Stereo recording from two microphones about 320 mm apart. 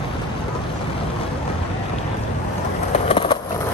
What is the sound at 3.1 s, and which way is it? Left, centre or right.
Skateboard, centre.